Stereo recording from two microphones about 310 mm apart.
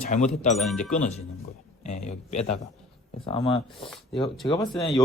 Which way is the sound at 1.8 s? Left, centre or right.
Left.